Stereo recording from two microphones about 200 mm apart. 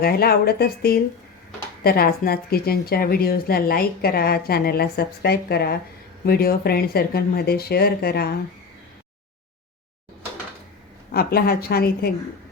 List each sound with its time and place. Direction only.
0.0 s a woman's voice: 50° left (ahead or behind)
11.1 s a woman's voice: 50° left (ahead or behind)